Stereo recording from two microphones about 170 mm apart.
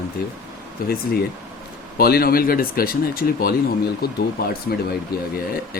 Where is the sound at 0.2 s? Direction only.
60° left (ahead or behind).